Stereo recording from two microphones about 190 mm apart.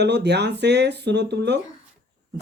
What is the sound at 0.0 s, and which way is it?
Speech, 60° right (ahead or behind).